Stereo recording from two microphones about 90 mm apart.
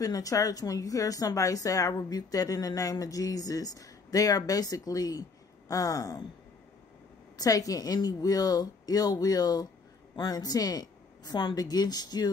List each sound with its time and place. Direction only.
0.0 s speech: 40° left (ahead or behind)
7.3 s a woman's voice: 40° left (ahead or behind)